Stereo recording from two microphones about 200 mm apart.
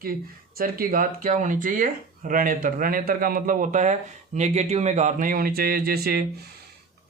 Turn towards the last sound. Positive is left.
turn(degrees=-50)  # may be behind; listen again after turning